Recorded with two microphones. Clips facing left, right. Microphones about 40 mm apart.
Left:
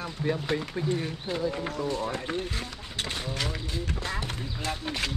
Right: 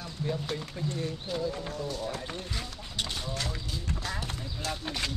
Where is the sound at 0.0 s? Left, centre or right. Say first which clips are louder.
Left 4 dB; left.